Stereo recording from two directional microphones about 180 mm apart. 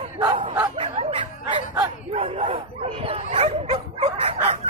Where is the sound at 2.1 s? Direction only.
30° right (ahead or behind).